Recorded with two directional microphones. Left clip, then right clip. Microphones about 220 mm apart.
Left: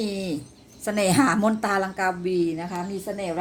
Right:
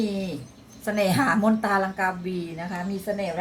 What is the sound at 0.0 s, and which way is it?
A woman's voice, 40° left (ahead or behind).